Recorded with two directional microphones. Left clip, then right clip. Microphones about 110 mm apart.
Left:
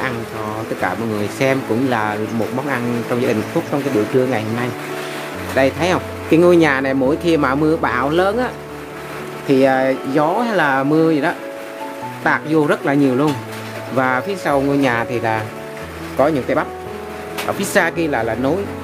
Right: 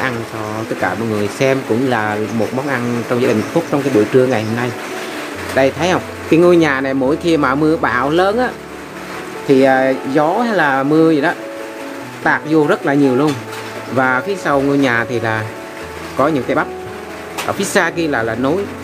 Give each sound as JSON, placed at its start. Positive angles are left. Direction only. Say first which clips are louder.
{"t": 1.4, "sound": "speech", "louder": "right 2 dB", "side_deg": 15}
{"t": 5.6, "sound": "speech", "louder": "right 2 dB", "side_deg": 15}
{"t": 9.5, "sound": "speech", "louder": "right 3 dB", "side_deg": 15}